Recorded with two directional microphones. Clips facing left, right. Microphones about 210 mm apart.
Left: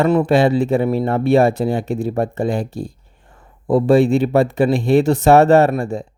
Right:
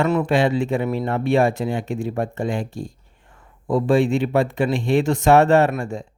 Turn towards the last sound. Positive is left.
turn(degrees=35)  # may be behind; listen again after turning